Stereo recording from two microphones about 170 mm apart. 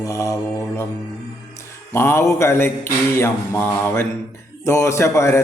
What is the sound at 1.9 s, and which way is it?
A man's voice, 15° left (ahead or behind).